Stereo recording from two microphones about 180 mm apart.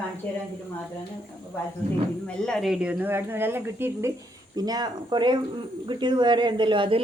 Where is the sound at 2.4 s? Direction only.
Centre (ahead or behind).